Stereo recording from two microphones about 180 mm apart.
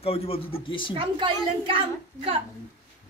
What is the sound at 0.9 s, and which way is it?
A woman's voice, 30° right (ahead or behind).